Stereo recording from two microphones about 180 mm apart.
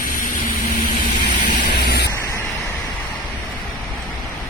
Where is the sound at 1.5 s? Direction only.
60° left (ahead or behind).